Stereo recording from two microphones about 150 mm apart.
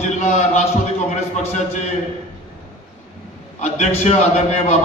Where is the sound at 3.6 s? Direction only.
45° left (ahead or behind).